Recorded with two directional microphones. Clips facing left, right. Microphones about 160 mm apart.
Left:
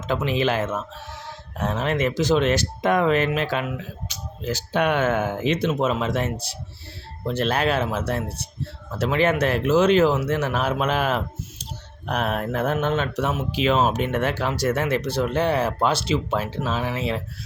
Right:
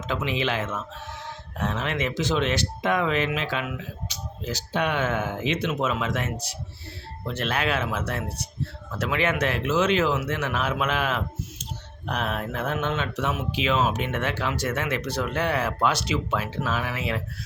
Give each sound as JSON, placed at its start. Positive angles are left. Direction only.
{"t": 0.1, "sound": "speech", "side_deg": 40}